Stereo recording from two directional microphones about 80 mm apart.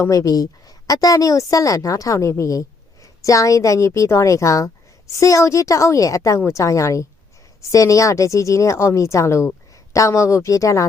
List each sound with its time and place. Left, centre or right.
0.0 s a woman's voice: left